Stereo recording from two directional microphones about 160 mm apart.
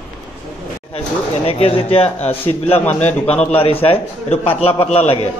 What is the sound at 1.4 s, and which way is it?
A man's voice, 40° left (ahead or behind).